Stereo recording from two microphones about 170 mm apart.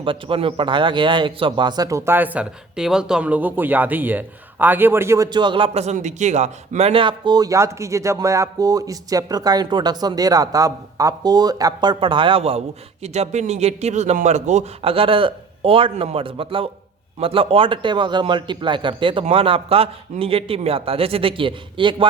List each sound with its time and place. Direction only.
0.0 s a man's voice: 30° right (ahead or behind)